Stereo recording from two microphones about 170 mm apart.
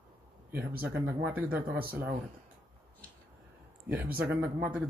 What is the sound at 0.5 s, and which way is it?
Speech, 10° right (ahead or behind).